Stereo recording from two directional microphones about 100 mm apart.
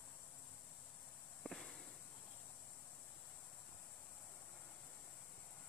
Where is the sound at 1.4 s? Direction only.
5° left (ahead or behind).